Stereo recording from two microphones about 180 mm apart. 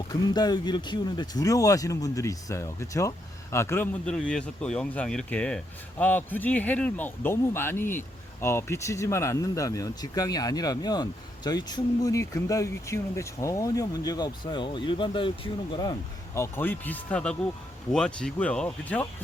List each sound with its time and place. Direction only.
0.1 s speech: 20° left (ahead or behind); by 19.0 s 5° left (ahead or behind)